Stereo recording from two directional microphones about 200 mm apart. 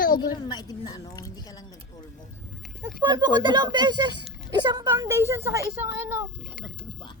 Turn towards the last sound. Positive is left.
turn(degrees=-15)  # may be behind; listen again after turning